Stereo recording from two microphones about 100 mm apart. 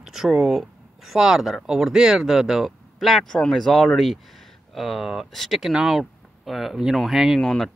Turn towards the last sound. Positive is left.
turn(degrees=5)  # may be behind; listen again after turning